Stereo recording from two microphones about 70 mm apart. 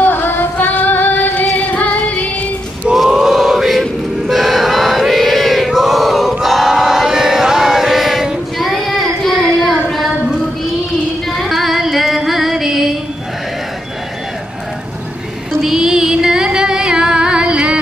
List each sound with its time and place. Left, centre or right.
0.0 s music: left
2.9 s chant: centre
11.2 s female singing: centre
12.3 s music: centre
15.6 s music: centre